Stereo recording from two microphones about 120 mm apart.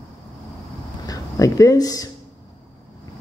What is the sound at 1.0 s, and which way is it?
Speech, 30° left (ahead or behind).